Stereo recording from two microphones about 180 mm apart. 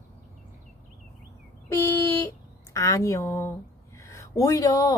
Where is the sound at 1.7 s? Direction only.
15° left (ahead or behind).